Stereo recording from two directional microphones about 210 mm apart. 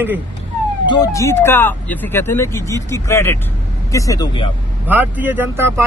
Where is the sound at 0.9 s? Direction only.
15° left (ahead or behind).